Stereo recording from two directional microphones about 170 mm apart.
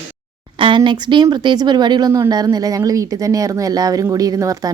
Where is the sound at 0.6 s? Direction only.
30° right (ahead or behind).